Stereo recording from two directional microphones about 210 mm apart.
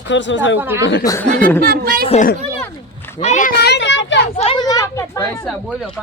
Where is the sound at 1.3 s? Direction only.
5° left (ahead or behind).